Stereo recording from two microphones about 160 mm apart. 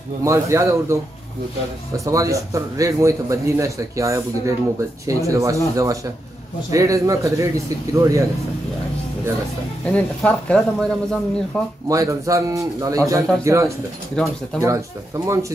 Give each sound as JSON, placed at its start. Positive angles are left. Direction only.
{"t": 0.2, "sound": "a man's voice", "side_deg": -20}
{"t": 2.0, "sound": "a man's voice", "side_deg": -20}
{"t": 9.8, "sound": "speech", "side_deg": 5}
{"t": 11.9, "sound": "a man's voice", "side_deg": -20}
{"t": 14.1, "sound": "speech", "side_deg": 5}
{"t": 14.6, "sound": "a man's voice", "side_deg": -20}